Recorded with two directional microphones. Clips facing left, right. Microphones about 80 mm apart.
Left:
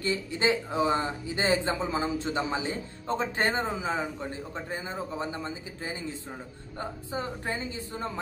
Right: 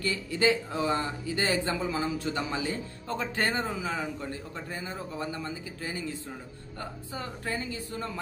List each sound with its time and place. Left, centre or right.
0.0 s speech: left